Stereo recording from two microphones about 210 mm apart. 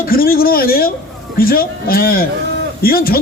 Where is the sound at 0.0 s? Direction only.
45° left (ahead or behind).